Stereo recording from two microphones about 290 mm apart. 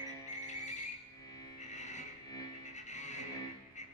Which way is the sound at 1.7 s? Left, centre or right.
Left.